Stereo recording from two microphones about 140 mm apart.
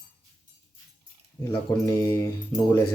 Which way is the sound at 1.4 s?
20° left (ahead or behind).